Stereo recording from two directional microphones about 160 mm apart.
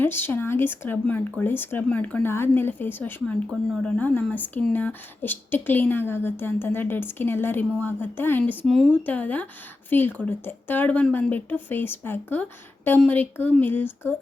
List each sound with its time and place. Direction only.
0.0 s speech: 10° left (ahead or behind)